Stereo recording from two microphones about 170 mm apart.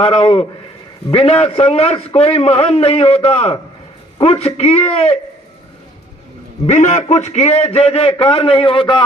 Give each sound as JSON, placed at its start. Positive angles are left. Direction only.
{"t": 0.0, "sound": "a man's voice", "side_deg": 35}
{"t": 6.7, "sound": "a man's voice", "side_deg": 45}